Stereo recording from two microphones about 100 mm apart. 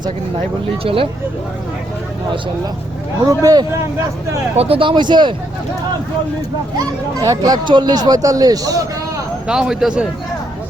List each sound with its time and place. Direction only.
0.9 s speech: 75° right (ahead or behind)
3.2 s speech: 40° right (ahead or behind)
4.5 s speech: 75° right (ahead or behind); by 5.3 s 50° right (ahead or behind)
6.7 s speech: 35° right (ahead or behind)
9.5 s a man's voice: 5° right (ahead or behind)